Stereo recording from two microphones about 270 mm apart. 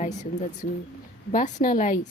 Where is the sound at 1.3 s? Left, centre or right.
Left.